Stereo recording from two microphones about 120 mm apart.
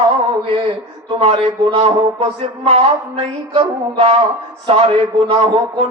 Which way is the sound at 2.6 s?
55° right (ahead or behind).